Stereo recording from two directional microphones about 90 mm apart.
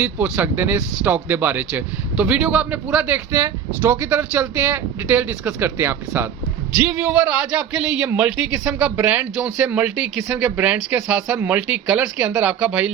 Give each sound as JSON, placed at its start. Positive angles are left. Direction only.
{"t": 0.0, "sound": "speech", "side_deg": -20}